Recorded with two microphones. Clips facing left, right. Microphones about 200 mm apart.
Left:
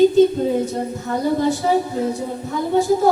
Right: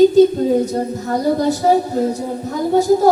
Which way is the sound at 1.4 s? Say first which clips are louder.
Right 3 dB; 40° right (ahead or behind).